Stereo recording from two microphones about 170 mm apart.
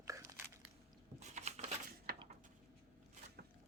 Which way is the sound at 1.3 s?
40° right (ahead or behind).